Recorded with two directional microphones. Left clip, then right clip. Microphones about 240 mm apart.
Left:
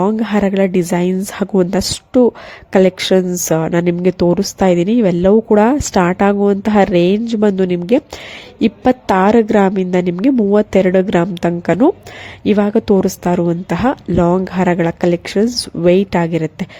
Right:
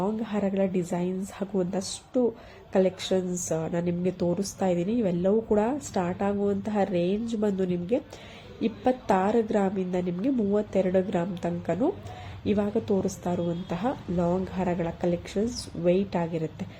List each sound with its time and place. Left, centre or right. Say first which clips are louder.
0.0 s speech: left 14 dB; left